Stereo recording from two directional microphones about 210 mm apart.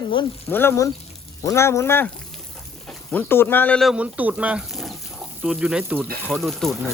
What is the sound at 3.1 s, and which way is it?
Speech, 10° left (ahead or behind).